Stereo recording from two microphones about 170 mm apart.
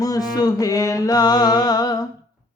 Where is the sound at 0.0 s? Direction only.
20° left (ahead or behind).